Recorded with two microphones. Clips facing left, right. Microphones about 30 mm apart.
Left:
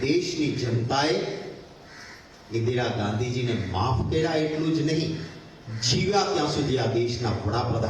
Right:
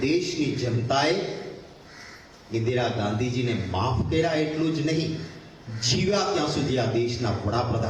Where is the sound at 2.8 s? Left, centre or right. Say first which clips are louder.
Right 1 dB; centre.